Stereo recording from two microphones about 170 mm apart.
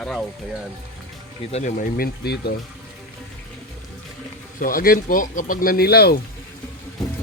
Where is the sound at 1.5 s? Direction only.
50° left (ahead or behind); by 2.5 s 70° left (ahead or behind).